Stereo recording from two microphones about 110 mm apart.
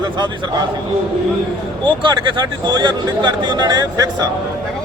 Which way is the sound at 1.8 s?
45° right (ahead or behind).